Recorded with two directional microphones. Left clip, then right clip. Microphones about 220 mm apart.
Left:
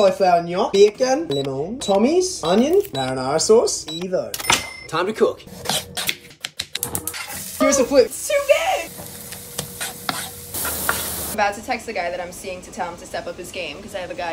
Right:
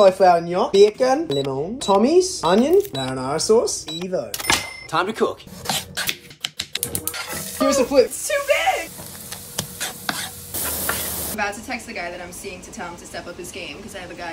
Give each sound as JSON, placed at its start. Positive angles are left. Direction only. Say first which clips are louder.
{"t": 0.0, "sound": "speech", "louder": "right 2 dB", "side_deg": 0}
{"t": 6.4, "sound": "typewriter", "louder": "right 1 dB", "side_deg": -30}
{"t": 7.6, "sound": "speech", "louder": "left 1 dB", "side_deg": -10}
{"t": 10.5, "sound": "stir", "louder": "left 3 dB", "side_deg": 0}